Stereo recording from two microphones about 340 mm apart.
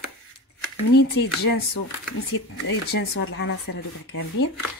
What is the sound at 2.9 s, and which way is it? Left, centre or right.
Speech, left.